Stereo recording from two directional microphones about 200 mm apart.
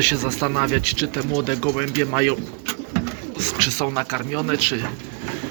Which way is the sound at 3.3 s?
15° left (ahead or behind).